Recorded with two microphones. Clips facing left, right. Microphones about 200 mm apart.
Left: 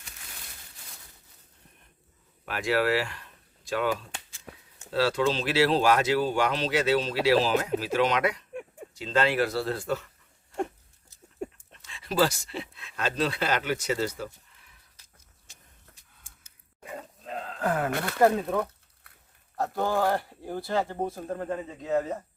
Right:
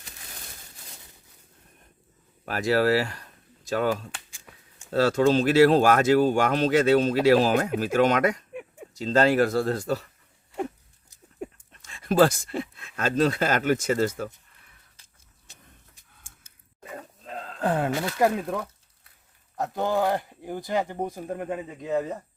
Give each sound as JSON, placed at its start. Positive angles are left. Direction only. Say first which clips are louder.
{"t": 2.5, "sound": "speech", "louder": "right 4 dB", "side_deg": -40}
{"t": 11.4, "sound": "dog", "louder": "left 1 dB", "side_deg": 0}
{"t": 11.8, "sound": "speech", "louder": "right 5 dB", "side_deg": -45}
{"t": 14.5, "sound": "a sound", "louder": "right 1 dB", "side_deg": -55}
{"t": 17.6, "sound": "speech", "louder": "right 3 dB", "side_deg": -30}
{"t": 18.2, "sound": "speech", "louder": "left 2 dB", "side_deg": -15}
{"t": 19.5, "sound": "speech", "louder": "right 1 dB", "side_deg": -20}